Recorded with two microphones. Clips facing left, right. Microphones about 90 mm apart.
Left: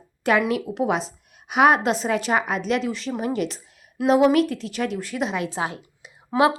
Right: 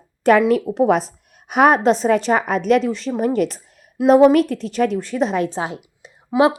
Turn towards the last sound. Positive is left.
turn(degrees=-20)  # may be behind; listen again after turning